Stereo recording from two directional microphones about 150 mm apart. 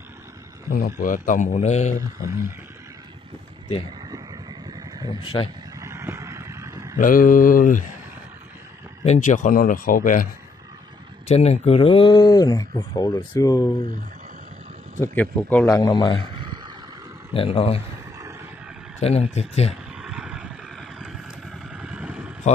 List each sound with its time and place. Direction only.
0.7 s a man's voice: 70° left (ahead or behind); by 2.3 s 50° left (ahead or behind)
4.1 s vehicle: 25° right (ahead or behind)
5.0 s speech: 35° left (ahead or behind)
5.8 s a sound: 20° right (ahead or behind)
7.0 s a man's voice: 65° left (ahead or behind)
9.0 s a man's voice: 50° left (ahead or behind); by 10.2 s 65° left (ahead or behind)
11.2 s speech: 45° left (ahead or behind); by 13.7 s 25° left (ahead or behind)
15.0 s speech: 10° left (ahead or behind)
15.6 s speech: 25° left (ahead or behind)
16.3 s a sound: 30° right (ahead or behind)
17.3 s speech: 40° left (ahead or behind)
18.9 s speech: 45° left (ahead or behind)
19.7 s vehicle: 5° right (ahead or behind)